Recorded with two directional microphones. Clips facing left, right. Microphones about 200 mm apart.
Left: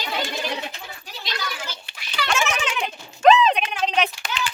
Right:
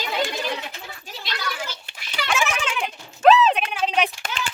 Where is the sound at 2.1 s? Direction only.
Centre (ahead or behind).